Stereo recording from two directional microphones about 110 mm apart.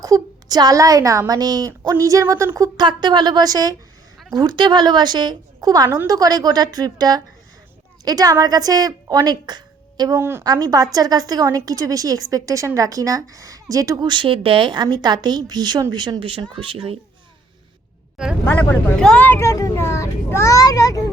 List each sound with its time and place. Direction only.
0.0 s a woman's voice: 35° right (ahead or behind)
2.7 s a woman's voice: 45° right (ahead or behind)
10.2 s speech: 20° right (ahead or behind)
10.4 s a woman's voice: 35° right (ahead or behind); by 17.0 s 55° right (ahead or behind)
18.4 s speech: 15° left (ahead or behind)
19.4 s a child's voice: 30° left (ahead or behind)